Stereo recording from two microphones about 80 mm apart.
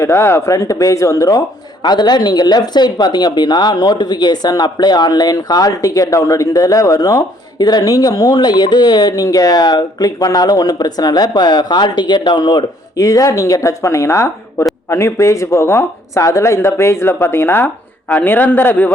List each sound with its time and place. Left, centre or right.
0.0 s speech: left
0.5 s speech: left
13.0 s a man's voice: left